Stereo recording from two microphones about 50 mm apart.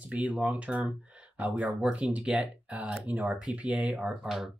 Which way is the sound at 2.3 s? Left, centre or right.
Right.